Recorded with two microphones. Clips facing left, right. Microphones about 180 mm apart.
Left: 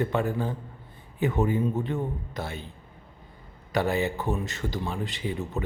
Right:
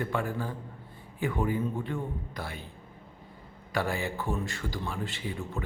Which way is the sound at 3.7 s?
20° left (ahead or behind).